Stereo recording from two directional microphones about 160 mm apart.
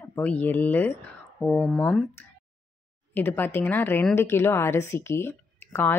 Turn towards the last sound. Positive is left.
turn(degrees=10)  # may be behind; listen again after turning